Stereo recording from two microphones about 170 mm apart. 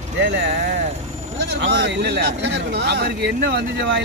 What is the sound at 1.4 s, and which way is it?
Speech, 85° right.